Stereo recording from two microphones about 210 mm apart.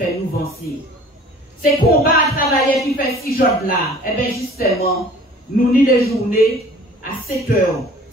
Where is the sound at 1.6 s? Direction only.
40° left (ahead or behind).